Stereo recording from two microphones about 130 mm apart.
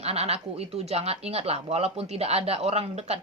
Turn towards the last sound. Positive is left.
turn(degrees=-55)  # may be behind; listen again after turning